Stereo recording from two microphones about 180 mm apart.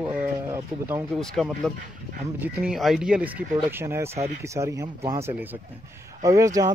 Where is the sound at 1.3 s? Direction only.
Centre (ahead or behind).